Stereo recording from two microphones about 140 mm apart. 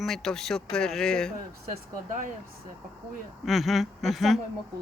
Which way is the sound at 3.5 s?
Centre (ahead or behind).